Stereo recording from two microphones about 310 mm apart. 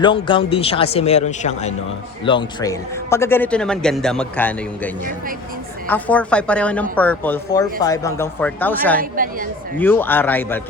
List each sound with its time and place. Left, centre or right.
0.0 s a man's voice: centre
5.9 s a man's voice: centre
9.0 s a woman's voice: right
9.7 s a man's voice: centre